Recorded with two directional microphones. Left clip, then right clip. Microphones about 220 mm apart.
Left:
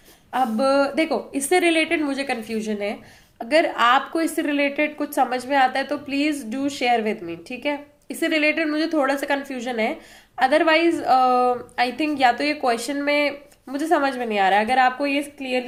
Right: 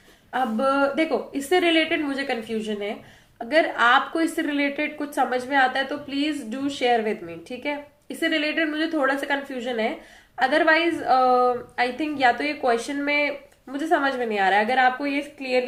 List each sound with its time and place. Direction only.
0.3 s a woman's voice: 35° left (ahead or behind)